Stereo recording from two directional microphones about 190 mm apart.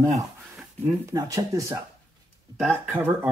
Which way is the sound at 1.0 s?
20° right (ahead or behind).